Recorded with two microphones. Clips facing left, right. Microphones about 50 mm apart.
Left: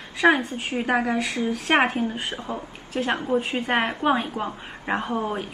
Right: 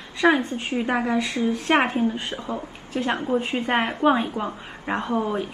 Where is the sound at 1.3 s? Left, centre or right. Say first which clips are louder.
Right 1 dB; left.